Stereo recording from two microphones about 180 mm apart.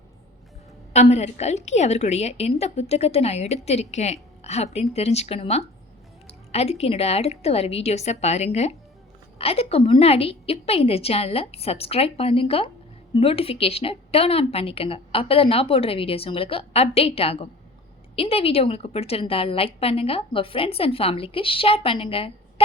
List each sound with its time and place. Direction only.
0.9 s a woman's voice: 40° left (ahead or behind)